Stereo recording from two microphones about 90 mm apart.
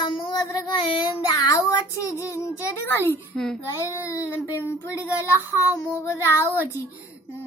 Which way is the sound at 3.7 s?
35° left (ahead or behind).